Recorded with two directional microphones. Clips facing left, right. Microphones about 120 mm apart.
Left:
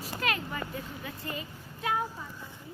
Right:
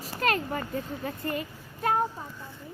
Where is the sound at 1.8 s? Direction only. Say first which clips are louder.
Right 5 dB; 45° right (ahead or behind).